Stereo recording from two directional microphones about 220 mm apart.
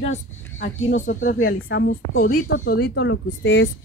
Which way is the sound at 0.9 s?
35° left (ahead or behind).